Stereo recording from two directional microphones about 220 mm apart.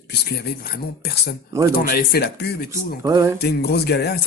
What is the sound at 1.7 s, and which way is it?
Speech, 45° left (ahead or behind).